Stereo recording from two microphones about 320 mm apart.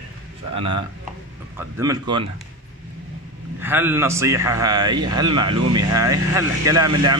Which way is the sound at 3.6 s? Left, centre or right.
Centre.